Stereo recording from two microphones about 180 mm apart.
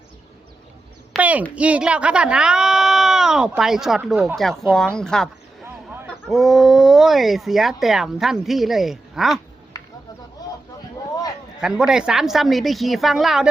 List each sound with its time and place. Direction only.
1.1 s speech: 10° right (ahead or behind)
10.4 s a sound: 20° left (ahead or behind)
11.6 s speech: 5° right (ahead or behind)